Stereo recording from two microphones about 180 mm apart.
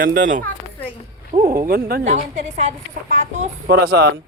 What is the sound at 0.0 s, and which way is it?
Speech, 50° right (ahead or behind).